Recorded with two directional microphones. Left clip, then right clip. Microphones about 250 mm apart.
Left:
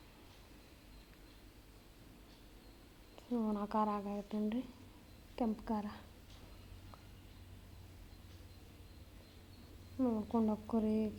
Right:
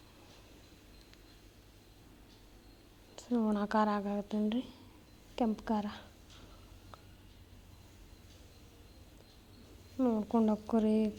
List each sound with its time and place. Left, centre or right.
3.2 s speech: right
10.0 s speech: right